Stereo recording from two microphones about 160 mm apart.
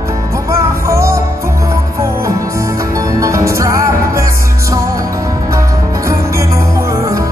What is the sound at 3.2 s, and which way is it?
Music, 20° right (ahead or behind).